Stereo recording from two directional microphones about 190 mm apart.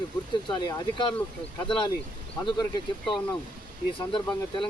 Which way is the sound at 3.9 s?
25° left (ahead or behind).